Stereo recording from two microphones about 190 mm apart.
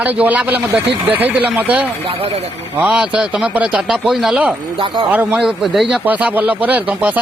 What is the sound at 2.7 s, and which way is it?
Speech, 5° right (ahead or behind).